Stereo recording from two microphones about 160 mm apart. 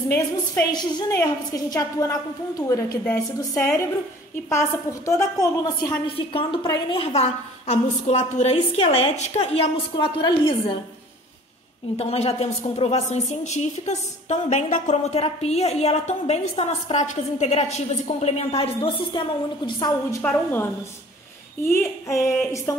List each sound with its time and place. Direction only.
0.1 s a woman's voice: 20° left (ahead or behind)
6.1 s a woman's voice: 35° left (ahead or behind)
9.9 s a woman's voice: 30° left (ahead or behind)
12.0 s a woman's voice: 40° left (ahead or behind); by 22.8 s 20° left (ahead or behind)